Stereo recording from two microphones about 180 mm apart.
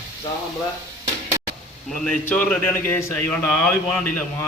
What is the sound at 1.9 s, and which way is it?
A man's voice, 5° left (ahead or behind).